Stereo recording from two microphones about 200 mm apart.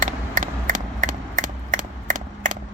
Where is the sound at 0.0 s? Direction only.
40° right (ahead or behind).